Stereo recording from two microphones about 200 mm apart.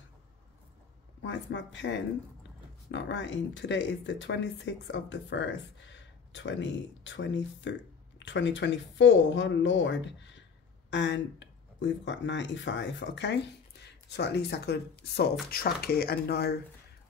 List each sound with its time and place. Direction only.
1.2 s speech: 65° left (ahead or behind)